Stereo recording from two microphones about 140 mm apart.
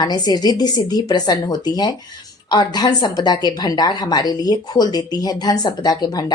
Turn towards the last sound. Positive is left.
turn(degrees=25)  # may be behind; listen again after turning